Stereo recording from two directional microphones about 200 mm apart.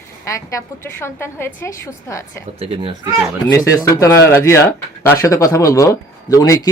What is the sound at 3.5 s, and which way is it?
Speech, 15° left (ahead or behind).